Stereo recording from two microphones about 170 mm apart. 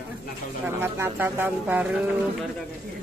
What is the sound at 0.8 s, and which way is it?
Speech, 15° right (ahead or behind).